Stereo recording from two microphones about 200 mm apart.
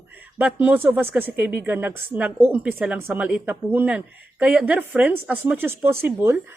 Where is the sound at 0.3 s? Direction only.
5° right (ahead or behind).